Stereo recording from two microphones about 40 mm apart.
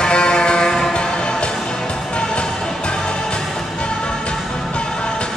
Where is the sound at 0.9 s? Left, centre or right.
Left.